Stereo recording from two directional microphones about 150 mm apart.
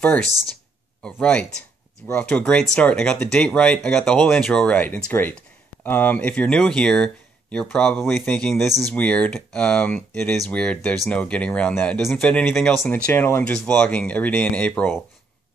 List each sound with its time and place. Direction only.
1.0 s speech: 10° left (ahead or behind)